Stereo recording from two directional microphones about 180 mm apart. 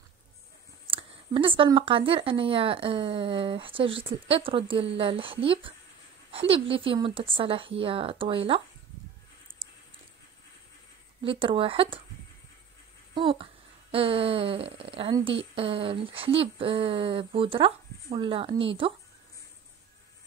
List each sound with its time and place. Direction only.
0.8 s speech: 30° right (ahead or behind)
11.2 s speech: 30° right (ahead or behind)
13.1 s speech: 30° right (ahead or behind)